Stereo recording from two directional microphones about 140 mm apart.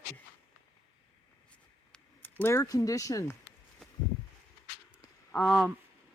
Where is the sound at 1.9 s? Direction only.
15° left (ahead or behind).